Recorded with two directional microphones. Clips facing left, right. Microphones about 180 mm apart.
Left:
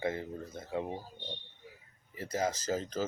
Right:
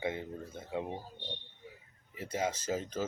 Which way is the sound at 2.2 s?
10° right (ahead or behind).